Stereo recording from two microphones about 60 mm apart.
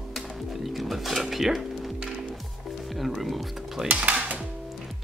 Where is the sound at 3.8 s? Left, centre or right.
Right.